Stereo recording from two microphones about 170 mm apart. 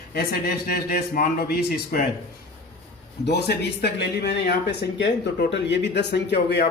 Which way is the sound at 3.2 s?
75° left (ahead or behind).